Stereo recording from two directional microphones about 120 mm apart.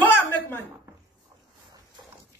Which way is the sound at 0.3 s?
15° left (ahead or behind).